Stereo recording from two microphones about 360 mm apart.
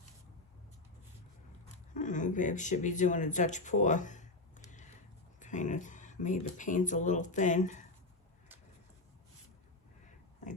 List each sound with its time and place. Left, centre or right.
1.9 s speech: left